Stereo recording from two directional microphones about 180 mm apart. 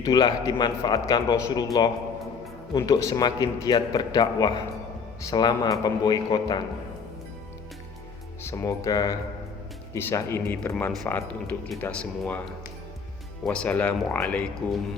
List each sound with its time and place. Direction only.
0.0 s a man's voice: 20° left (ahead or behind)
8.4 s speech: 15° left (ahead or behind)
13.4 s speech: 5° left (ahead or behind)